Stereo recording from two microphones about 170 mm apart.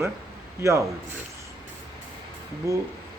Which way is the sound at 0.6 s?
15° right (ahead or behind).